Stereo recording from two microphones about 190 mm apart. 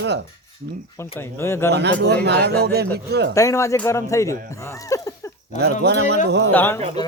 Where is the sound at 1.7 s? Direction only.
60° right (ahead or behind).